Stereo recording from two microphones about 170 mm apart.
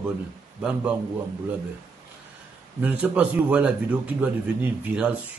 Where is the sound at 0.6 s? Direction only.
5° right (ahead or behind).